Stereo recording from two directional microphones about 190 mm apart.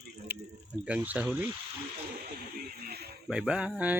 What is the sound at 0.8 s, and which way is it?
Speech, 5° right (ahead or behind).